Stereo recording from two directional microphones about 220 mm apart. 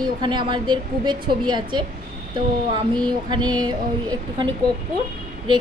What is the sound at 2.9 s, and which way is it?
A woman's voice, 20° right (ahead or behind).